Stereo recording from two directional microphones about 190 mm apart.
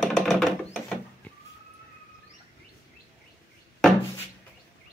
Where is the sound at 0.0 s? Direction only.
Centre (ahead or behind).